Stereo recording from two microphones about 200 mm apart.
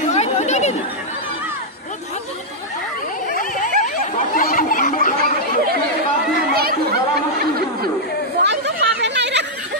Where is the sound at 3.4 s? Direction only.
40° left (ahead or behind).